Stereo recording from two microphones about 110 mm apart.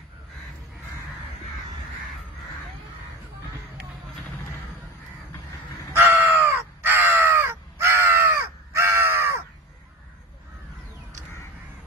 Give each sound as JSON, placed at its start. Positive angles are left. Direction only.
{"t": 5.9, "sound": "crow", "side_deg": -20}